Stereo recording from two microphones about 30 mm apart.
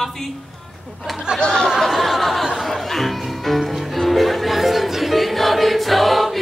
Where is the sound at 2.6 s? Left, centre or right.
Centre.